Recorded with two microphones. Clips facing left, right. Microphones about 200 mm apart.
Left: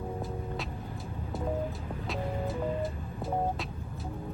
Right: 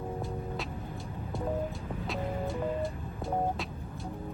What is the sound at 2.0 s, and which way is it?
Music, centre (ahead or behind).